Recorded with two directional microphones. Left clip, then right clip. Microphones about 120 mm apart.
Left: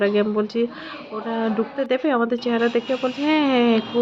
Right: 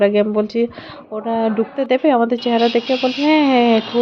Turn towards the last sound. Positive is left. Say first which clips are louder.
# right 5 dB
turn(degrees=-30)  # may be behind; listen again after turning